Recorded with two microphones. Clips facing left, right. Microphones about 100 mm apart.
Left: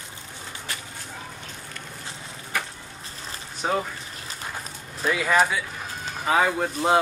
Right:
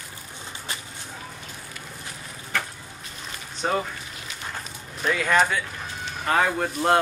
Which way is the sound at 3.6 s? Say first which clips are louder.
Even; centre (ahead or behind).